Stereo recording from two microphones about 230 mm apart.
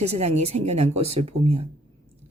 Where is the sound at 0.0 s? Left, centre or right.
Right.